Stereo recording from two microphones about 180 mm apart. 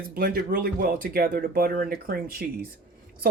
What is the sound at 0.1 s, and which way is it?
Speech, 55° right (ahead or behind).